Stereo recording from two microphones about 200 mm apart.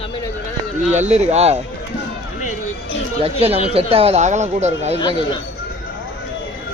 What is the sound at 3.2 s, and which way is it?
Speech, 30° right (ahead or behind).